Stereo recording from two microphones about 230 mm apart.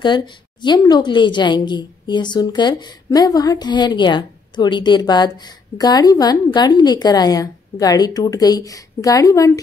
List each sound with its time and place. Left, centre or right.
0.0 s a woman's voice: centre